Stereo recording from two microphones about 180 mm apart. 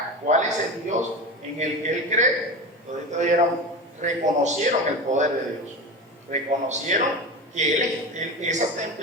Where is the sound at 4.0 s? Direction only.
40° right (ahead or behind).